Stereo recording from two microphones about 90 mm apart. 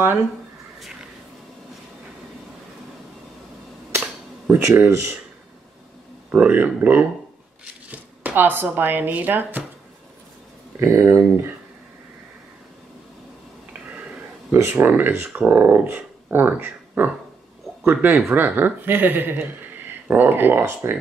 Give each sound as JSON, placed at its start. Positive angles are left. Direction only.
{"t": 4.5, "sound": "speech", "side_deg": -25}
{"t": 6.3, "sound": "speech", "side_deg": -20}
{"t": 10.8, "sound": "speech", "side_deg": -25}
{"t": 14.5, "sound": "speech", "side_deg": -25}